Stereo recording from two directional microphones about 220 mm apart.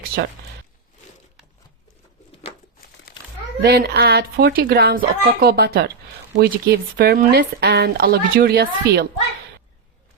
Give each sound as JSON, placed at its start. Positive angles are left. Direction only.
{"t": 0.1, "sound": "speech", "side_deg": -45}
{"t": 3.1, "sound": "a sound", "side_deg": 45}
{"t": 3.6, "sound": "speech", "side_deg": -45}